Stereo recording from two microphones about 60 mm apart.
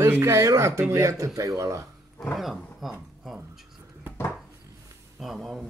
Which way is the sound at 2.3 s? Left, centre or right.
Centre.